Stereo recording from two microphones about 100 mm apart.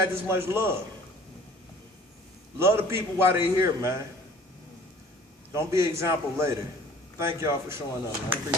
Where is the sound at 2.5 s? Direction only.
25° right (ahead or behind).